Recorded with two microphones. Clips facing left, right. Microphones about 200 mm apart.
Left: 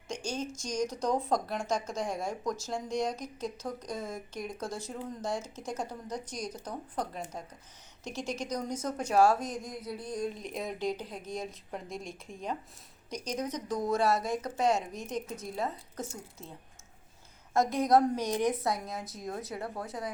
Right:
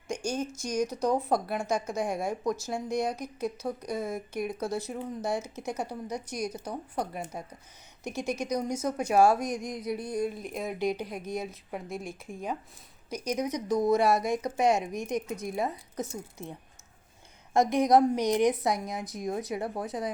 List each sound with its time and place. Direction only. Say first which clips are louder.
0.1 s speech: right 4 dB; 10° right (ahead or behind)